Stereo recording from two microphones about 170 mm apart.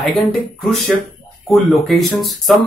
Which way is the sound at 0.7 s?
Centre (ahead or behind).